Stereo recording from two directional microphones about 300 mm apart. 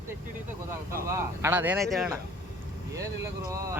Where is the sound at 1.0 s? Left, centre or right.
Centre.